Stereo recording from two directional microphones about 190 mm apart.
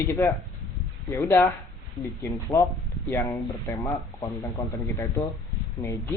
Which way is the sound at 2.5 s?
10° left (ahead or behind).